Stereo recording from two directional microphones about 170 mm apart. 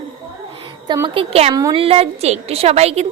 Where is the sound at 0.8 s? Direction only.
25° right (ahead or behind).